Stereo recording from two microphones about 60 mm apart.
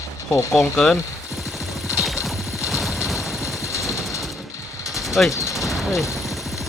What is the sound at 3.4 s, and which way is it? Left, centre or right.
Vehicle, left.